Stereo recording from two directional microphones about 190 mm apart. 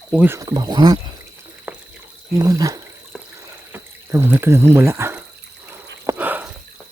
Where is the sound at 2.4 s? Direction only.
15° right (ahead or behind).